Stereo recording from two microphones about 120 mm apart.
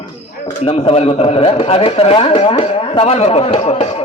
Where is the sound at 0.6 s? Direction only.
55° left (ahead or behind).